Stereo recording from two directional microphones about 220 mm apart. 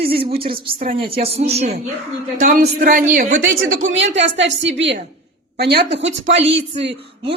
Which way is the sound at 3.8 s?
60° right (ahead or behind).